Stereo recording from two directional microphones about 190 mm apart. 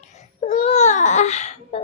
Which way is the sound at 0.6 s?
35° left (ahead or behind).